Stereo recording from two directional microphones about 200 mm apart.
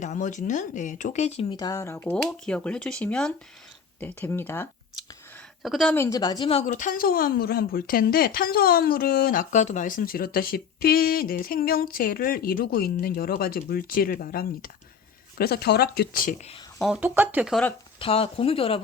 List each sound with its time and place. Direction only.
0.0 s speech: 40° left (ahead or behind); by 2.1 s 15° left (ahead or behind)
2.1 s speech: 5° left (ahead or behind)
5.6 s speech: centre (ahead or behind)
6.0 s speech: 15° left (ahead or behind); by 16.6 s 40° left (ahead or behind)
16.8 s speech: 5° right (ahead or behind)
18.0 s speech: 30° left (ahead or behind)